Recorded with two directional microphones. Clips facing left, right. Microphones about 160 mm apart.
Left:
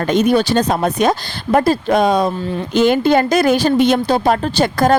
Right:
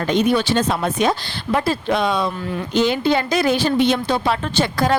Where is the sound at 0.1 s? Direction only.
45° left (ahead or behind).